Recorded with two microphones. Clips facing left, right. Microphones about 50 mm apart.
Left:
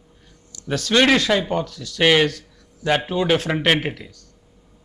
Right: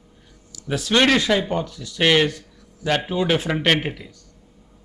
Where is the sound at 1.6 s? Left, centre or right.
Centre.